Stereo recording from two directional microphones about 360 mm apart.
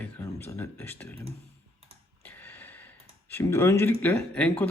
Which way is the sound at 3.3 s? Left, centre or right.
Centre.